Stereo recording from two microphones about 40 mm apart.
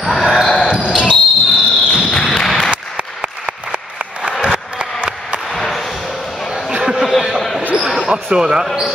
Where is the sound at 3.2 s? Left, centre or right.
Right.